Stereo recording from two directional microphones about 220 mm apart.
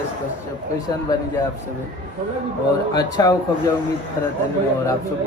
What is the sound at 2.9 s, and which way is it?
Speech, 15° left (ahead or behind).